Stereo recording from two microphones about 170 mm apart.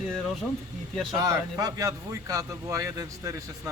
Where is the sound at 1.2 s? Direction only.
20° right (ahead or behind).